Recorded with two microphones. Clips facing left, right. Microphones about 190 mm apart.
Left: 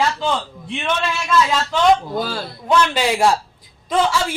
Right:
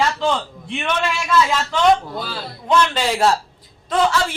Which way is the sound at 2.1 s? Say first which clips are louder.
Left 5 dB; 45° left (ahead or behind).